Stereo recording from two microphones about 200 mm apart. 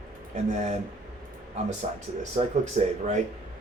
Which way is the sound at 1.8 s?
35° right (ahead or behind).